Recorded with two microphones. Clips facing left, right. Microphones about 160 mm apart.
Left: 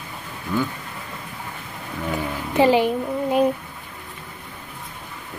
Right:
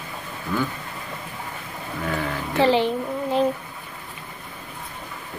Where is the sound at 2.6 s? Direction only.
10° left (ahead or behind).